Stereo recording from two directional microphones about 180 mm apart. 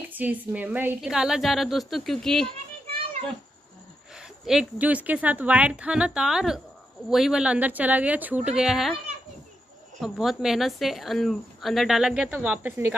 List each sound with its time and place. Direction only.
0.1 s a woman's voice: 10° right (ahead or behind)
2.9 s a sound: 30° right (ahead or behind)
4.1 s a woman's voice: 5° right (ahead or behind)
9.9 s a woman's voice: centre (ahead or behind)